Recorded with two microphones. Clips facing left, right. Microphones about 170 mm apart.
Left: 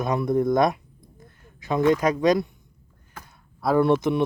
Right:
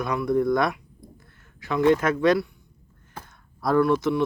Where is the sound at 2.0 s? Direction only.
15° left (ahead or behind).